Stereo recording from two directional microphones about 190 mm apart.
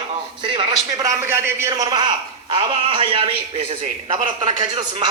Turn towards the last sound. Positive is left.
turn(degrees=-25)  # may be behind; listen again after turning